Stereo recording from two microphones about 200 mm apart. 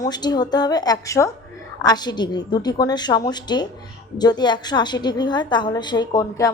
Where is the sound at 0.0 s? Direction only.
20° left (ahead or behind).